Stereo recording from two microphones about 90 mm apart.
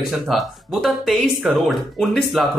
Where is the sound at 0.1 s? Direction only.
Centre (ahead or behind).